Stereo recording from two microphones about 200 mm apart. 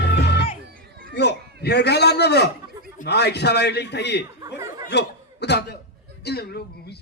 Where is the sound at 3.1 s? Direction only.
55° left (ahead or behind).